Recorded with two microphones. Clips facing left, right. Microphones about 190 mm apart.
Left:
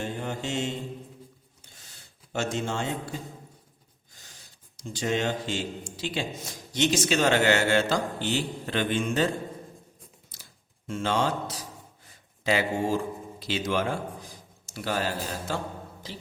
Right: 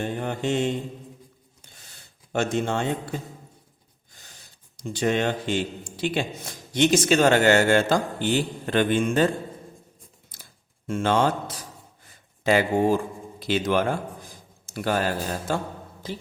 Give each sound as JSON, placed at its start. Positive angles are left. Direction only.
{"t": 0.0, "sound": "mantra", "side_deg": -60}
{"t": 2.3, "sound": "a man's voice", "side_deg": -55}
{"t": 4.8, "sound": "speech", "side_deg": -60}
{"t": 10.3, "sound": "a sound", "side_deg": -55}
{"t": 10.8, "sound": "a man's voice", "side_deg": -55}